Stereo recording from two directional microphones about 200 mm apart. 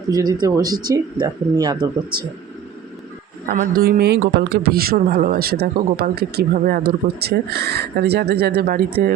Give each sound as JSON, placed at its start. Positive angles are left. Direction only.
{"t": 0.1, "sound": "speech", "side_deg": -20}
{"t": 3.4, "sound": "speech", "side_deg": -40}